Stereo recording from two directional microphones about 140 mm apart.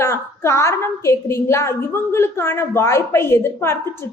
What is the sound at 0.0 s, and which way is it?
A woman's voice, 20° left (ahead or behind).